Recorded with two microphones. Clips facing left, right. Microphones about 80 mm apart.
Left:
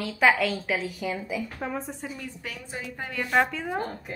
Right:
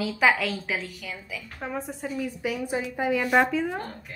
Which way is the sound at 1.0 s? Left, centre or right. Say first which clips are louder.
Left 7 dB; left.